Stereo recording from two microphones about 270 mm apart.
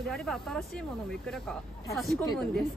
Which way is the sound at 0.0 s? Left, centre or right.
Centre.